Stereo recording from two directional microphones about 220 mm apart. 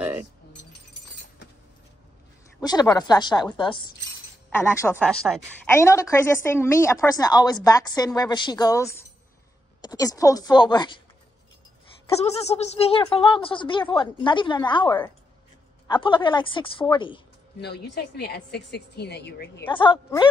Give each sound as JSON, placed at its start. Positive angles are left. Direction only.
{"t": 2.6, "sound": "a woman's voice", "side_deg": 20}
{"t": 4.7, "sound": "a woman's voice", "side_deg": 5}
{"t": 12.2, "sound": "speech", "side_deg": 30}
{"t": 17.6, "sound": "a woman's voice", "side_deg": 50}
{"t": 19.7, "sound": "speech", "side_deg": 20}